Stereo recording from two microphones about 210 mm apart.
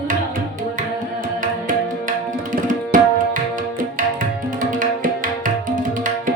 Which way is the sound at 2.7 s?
40° right (ahead or behind).